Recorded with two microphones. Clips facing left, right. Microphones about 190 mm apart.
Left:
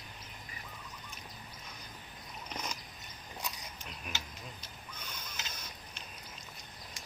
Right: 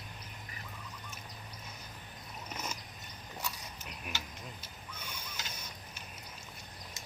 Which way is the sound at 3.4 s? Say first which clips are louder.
Right 1 dB; 15° left (ahead or behind).